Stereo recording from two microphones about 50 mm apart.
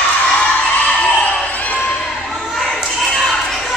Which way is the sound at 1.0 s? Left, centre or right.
Left.